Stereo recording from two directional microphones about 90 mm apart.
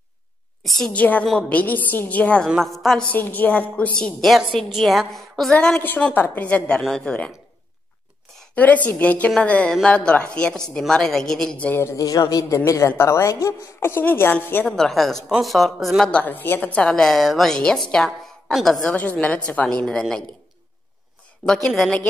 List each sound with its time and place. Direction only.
0.7 s a woman's voice: centre (ahead or behind)
0.9 s a woman's voice: 15° left (ahead or behind)
2.5 s a woman's voice: centre (ahead or behind)
3.1 s a woman's voice: 20° left (ahead or behind)
4.6 s a woman's voice: centre (ahead or behind)
5.8 s a woman's voice: 20° left (ahead or behind)
8.5 s a woman's voice: 20° left (ahead or behind)
11.8 s speech: 35° left (ahead or behind); by 14.8 s 20° left (ahead or behind)
14.8 s a woman's voice: centre (ahead or behind)
16.1 s a woman's voice: 20° left (ahead or behind)
18.9 s a woman's voice: 15° left (ahead or behind)
21.6 s a woman's voice: 5° left (ahead or behind)